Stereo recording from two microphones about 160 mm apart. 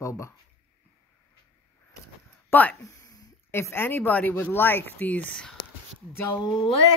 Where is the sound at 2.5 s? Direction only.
10° left (ahead or behind).